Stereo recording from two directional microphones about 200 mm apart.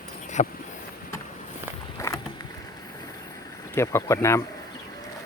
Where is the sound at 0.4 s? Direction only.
35° left (ahead or behind).